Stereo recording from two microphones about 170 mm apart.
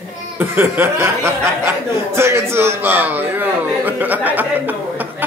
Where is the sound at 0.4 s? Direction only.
15° right (ahead or behind).